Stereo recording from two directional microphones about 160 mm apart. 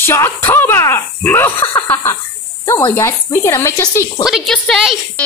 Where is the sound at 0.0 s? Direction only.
15° left (ahead or behind).